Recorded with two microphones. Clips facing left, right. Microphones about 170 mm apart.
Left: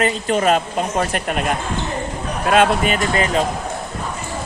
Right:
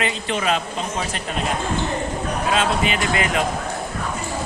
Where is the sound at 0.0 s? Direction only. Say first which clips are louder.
Left 6 dB; 45° left (ahead or behind).